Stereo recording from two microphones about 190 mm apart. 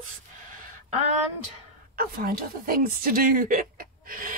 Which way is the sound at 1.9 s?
50° right (ahead or behind).